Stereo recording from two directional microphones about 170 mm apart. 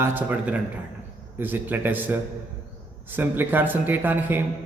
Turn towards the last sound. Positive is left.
turn(degrees=-10)  # may be behind; listen again after turning